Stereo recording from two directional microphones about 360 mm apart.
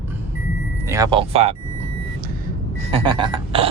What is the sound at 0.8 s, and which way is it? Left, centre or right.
Speech, centre.